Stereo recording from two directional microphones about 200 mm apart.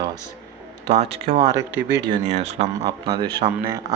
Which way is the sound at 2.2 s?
35° right (ahead or behind).